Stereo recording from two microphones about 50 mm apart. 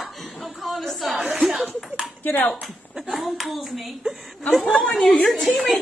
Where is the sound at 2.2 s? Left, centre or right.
Left.